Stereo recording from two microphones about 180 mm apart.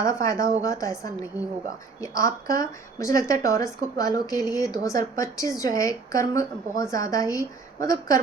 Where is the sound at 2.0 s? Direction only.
15° left (ahead or behind).